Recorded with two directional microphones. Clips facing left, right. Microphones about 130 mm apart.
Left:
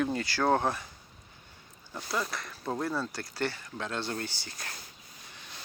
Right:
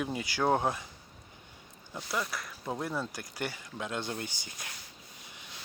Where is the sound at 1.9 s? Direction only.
10° right (ahead or behind).